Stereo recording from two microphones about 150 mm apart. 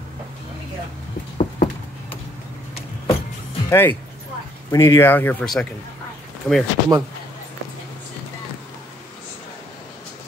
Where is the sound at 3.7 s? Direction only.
15° left (ahead or behind).